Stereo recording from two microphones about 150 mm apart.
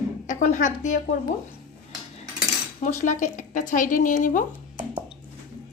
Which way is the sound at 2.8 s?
55° left (ahead or behind).